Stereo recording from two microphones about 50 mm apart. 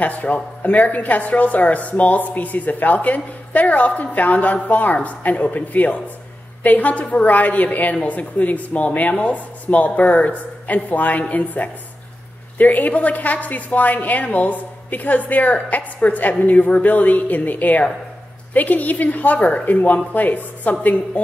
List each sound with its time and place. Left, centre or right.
0.0 s a woman's voice: left